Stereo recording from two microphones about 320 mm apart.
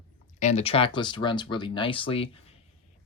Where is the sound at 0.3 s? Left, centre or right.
Left.